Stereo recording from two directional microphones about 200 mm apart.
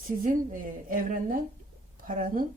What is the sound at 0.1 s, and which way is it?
A woman's voice, 45° right (ahead or behind).